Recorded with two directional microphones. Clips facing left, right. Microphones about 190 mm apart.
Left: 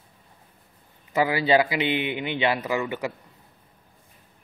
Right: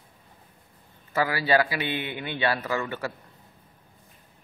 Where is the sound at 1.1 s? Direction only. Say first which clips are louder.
Left 3 dB; 20° left (ahead or behind).